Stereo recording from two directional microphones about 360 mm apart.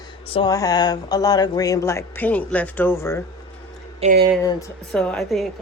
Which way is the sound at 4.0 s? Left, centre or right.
Right.